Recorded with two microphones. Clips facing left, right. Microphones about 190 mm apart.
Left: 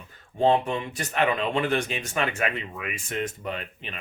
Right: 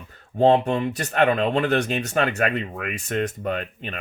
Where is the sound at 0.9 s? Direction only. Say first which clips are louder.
Right 3 dB; 60° right (ahead or behind).